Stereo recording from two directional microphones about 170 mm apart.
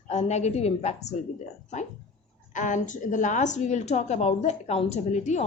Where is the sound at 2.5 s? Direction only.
50° left (ahead or behind).